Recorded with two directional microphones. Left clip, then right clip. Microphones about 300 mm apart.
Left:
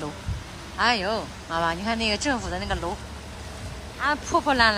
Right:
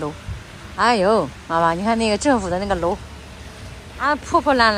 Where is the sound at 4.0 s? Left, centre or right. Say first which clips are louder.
Right 5 dB; centre.